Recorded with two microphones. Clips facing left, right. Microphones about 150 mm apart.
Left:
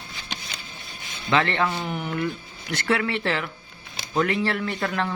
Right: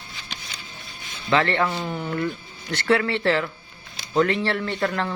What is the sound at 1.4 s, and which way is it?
A man's voice, 20° left (ahead or behind).